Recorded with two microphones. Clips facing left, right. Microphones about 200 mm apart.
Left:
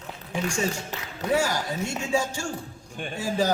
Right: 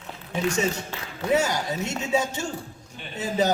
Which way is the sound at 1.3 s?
20° right (ahead or behind).